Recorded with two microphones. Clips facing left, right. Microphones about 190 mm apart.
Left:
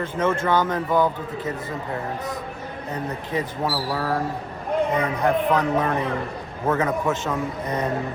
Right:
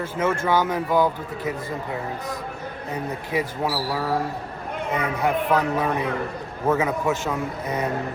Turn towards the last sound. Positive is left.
turn(degrees=-5)  # may be behind; listen again after turning